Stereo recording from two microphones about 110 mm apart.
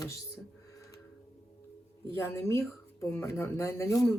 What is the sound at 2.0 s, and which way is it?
Speech, 25° left (ahead or behind).